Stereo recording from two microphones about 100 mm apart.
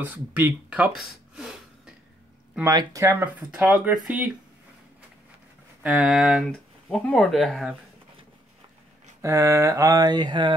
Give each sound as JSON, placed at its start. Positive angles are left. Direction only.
{"t": 0.0, "sound": "speech", "side_deg": -20}
{"t": 2.7, "sound": "mantra", "side_deg": -35}
{"t": 3.5, "sound": "speech", "side_deg": -10}
{"t": 5.8, "sound": "speech", "side_deg": -5}
{"t": 6.5, "sound": "speech", "side_deg": 10}
{"t": 9.2, "sound": "mantra", "side_deg": -30}
{"t": 10.0, "sound": "speech", "side_deg": -45}